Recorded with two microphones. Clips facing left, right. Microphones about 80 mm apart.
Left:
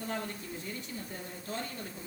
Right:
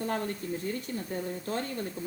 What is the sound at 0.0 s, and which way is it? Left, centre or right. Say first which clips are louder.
A woman's voice: right 6 dB; right.